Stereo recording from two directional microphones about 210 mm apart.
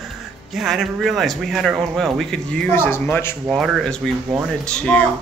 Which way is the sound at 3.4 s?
Centre (ahead or behind).